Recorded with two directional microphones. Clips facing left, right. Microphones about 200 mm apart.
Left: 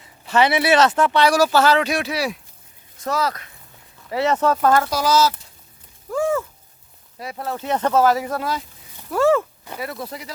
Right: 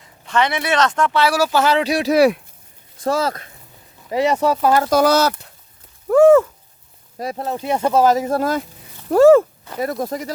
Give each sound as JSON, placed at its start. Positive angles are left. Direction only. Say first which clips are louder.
{"t": 0.3, "sound": "speech", "louder": "left 2 dB", "side_deg": 5}
{"t": 1.6, "sound": "speech", "louder": "right 2 dB", "side_deg": -30}
{"t": 2.1, "sound": "speech", "louder": "right 12 dB", "side_deg": -60}
{"t": 3.0, "sound": "speech", "louder": "right 4 dB", "side_deg": -30}
{"t": 4.1, "sound": "speech", "louder": "right 2 dB", "side_deg": -15}
{"t": 4.9, "sound": "speech", "louder": "right 4 dB", "side_deg": -55}
{"t": 6.1, "sound": "a sound", "louder": "right 12 dB", "side_deg": -65}
{"t": 7.3, "sound": "speech", "louder": "right 1 dB", "side_deg": -20}
{"t": 8.3, "sound": "speech", "louder": "right 6 dB", "side_deg": -45}